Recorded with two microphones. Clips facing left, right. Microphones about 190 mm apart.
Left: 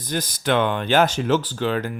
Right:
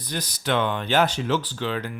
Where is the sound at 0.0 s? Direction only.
50° left (ahead or behind).